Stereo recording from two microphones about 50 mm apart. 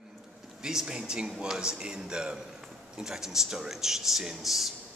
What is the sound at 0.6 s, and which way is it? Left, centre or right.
Speech, centre.